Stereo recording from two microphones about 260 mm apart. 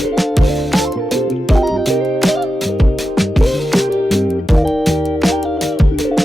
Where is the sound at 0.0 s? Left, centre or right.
Centre.